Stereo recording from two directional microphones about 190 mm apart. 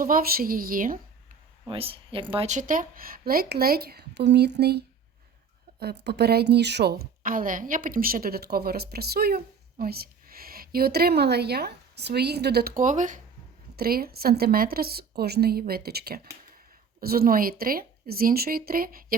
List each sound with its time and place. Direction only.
0.0 s a woman's voice: 50° right (ahead or behind)
1.6 s a woman's voice: 30° right (ahead or behind); by 4.8 s 60° right (ahead or behind)
5.8 s a woman's voice: 60° right (ahead or behind); by 13.2 s 40° right (ahead or behind)
13.7 s a woman's voice: 50° right (ahead or behind)